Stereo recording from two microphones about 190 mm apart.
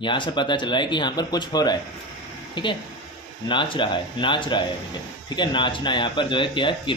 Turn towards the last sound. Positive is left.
turn(degrees=25)  # may be behind; listen again after turning